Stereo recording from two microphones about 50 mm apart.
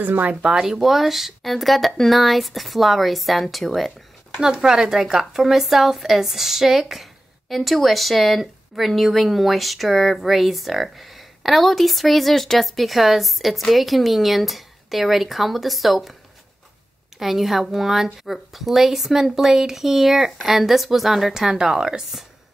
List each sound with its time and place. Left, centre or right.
0.0 s speech: right
0.4 s speech: centre
4.4 s speech: centre
17.2 s speech: centre